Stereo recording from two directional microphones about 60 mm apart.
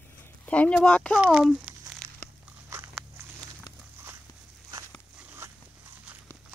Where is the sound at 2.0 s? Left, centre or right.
Right.